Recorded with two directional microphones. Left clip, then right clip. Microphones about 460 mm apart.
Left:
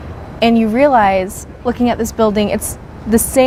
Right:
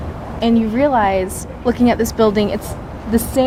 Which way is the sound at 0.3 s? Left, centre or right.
Left.